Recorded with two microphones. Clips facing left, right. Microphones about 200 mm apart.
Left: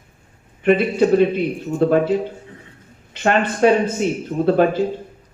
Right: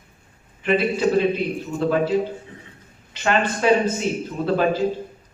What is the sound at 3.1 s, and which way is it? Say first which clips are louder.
Speech: left 3 dB; 55° left (ahead or behind).